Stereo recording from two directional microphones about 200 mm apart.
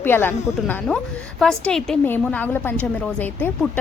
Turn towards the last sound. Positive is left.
turn(degrees=5)  # may be behind; listen again after turning